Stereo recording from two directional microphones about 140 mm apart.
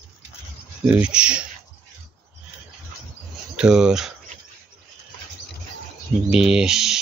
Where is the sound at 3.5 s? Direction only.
5° right (ahead or behind).